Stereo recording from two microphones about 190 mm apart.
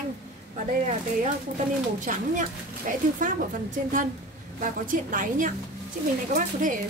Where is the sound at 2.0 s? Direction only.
45° right (ahead or behind).